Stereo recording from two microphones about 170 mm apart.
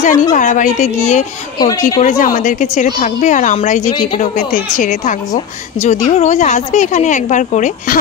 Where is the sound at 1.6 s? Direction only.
20° left (ahead or behind).